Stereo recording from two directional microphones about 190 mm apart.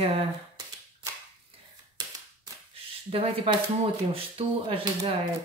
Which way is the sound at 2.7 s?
30° right (ahead or behind).